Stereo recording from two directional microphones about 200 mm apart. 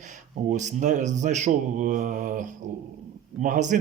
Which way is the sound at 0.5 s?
35° right (ahead or behind).